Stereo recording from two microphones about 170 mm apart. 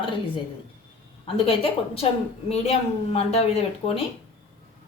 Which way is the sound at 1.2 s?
35° left (ahead or behind).